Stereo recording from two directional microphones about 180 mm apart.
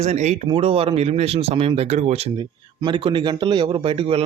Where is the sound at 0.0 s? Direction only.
40° right (ahead or behind).